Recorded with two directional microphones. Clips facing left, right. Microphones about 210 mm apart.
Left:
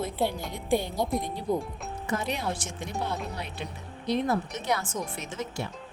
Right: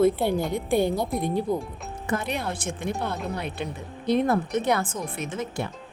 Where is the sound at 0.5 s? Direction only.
55° right (ahead or behind).